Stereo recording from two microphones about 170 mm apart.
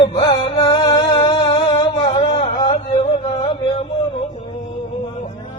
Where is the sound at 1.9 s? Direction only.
35° left (ahead or behind).